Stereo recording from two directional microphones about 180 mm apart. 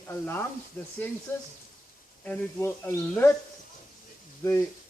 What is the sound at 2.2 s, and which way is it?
Speech, 10° left (ahead or behind).